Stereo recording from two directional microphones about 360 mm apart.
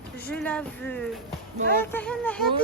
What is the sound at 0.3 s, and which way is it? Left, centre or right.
Speech, centre.